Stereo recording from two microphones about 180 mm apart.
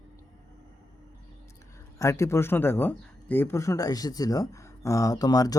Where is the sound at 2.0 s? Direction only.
15° left (ahead or behind).